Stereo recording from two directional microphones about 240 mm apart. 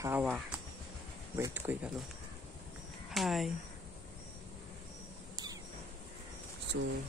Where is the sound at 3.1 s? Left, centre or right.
Centre.